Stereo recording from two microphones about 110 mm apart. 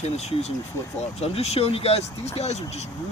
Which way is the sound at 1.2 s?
70° left (ahead or behind).